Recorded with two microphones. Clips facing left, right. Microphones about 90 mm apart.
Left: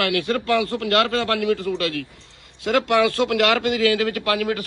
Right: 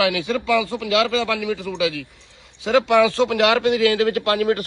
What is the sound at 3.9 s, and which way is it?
Speech, 35° right (ahead or behind).